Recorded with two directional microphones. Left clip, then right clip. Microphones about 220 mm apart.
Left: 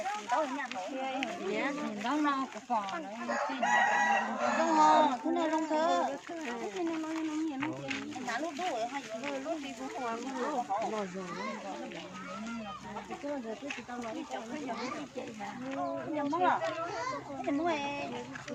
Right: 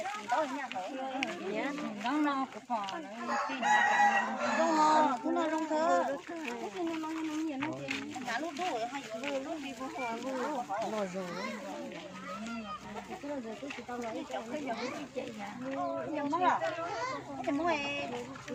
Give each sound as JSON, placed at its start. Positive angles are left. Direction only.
{"t": 2.0, "sound": "speech", "side_deg": 15}
{"t": 3.2, "sound": "chicken", "side_deg": -55}
{"t": 4.8, "sound": "speech", "side_deg": -5}
{"t": 7.6, "sound": "speech", "side_deg": -50}
{"t": 16.1, "sound": "speech", "side_deg": -25}
{"t": 17.7, "sound": "speech", "side_deg": -25}